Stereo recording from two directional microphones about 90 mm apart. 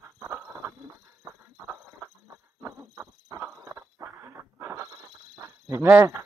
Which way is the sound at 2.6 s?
30° right (ahead or behind).